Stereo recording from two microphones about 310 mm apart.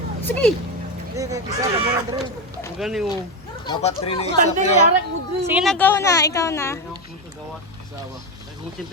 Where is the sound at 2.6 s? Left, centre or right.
Centre.